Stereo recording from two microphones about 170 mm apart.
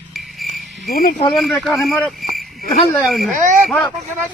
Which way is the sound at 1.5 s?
5° left (ahead or behind).